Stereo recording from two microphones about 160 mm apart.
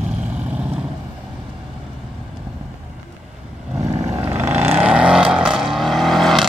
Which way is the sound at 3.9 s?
20° right (ahead or behind).